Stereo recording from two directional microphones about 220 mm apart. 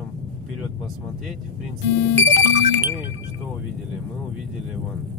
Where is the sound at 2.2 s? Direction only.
35° right (ahead or behind).